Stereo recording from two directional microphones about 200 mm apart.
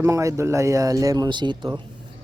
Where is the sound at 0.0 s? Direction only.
15° right (ahead or behind).